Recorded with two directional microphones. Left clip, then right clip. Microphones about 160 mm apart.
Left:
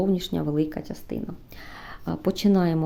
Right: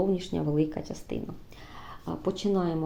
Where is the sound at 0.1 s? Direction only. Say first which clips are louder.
Left 2 dB; 30° left (ahead or behind).